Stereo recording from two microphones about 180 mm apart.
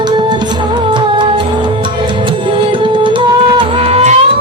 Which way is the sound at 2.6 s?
25° right (ahead or behind).